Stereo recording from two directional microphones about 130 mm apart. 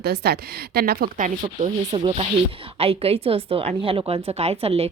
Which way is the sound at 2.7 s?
50° right (ahead or behind).